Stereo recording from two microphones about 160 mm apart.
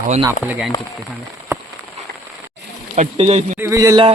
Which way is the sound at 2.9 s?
40° right (ahead or behind).